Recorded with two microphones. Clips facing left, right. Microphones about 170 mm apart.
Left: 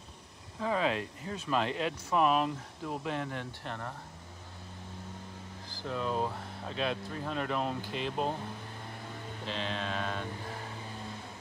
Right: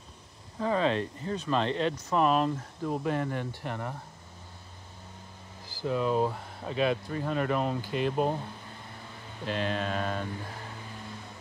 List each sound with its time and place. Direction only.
0.6 s speech: 5° left (ahead or behind)
5.7 s speech: 5° right (ahead or behind)
9.5 s mantra: 50° right (ahead or behind)
9.8 s speech: 5° right (ahead or behind)